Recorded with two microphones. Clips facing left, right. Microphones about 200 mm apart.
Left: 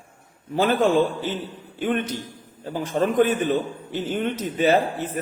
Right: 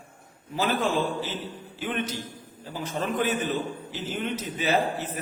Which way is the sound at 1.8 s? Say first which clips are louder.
Left 6 dB; 50° left (ahead or behind).